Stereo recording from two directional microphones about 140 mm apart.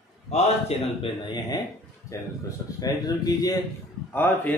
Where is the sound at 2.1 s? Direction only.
20° left (ahead or behind).